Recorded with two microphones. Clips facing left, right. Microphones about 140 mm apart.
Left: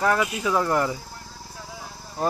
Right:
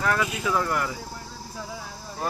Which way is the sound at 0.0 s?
25° left (ahead or behind).